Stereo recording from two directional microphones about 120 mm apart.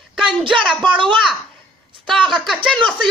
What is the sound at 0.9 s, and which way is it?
Speech, 45° right (ahead or behind).